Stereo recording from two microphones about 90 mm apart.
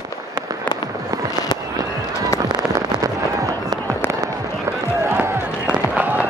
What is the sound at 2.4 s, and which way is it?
Fireworks, 50° right (ahead or behind).